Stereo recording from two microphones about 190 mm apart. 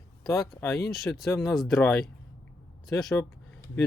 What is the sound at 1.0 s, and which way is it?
Speech, centre (ahead or behind).